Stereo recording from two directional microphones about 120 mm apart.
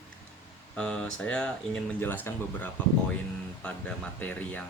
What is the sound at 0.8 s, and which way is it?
Speech, 10° left (ahead or behind).